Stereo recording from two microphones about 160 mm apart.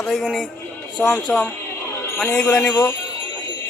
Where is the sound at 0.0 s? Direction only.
Centre (ahead or behind); by 2.9 s 20° left (ahead or behind).